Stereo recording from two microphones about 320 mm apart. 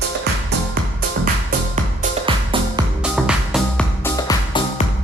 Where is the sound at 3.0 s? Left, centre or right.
Centre.